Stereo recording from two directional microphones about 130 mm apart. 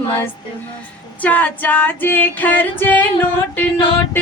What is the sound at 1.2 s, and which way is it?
Female singing, 15° left (ahead or behind).